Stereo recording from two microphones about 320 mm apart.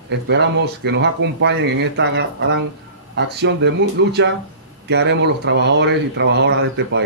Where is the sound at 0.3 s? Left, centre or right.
Right.